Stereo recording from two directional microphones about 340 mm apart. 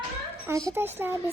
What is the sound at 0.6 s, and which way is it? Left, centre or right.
Speech, centre.